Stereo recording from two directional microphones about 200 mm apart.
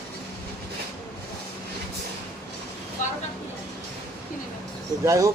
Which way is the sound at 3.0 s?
40° left (ahead or behind).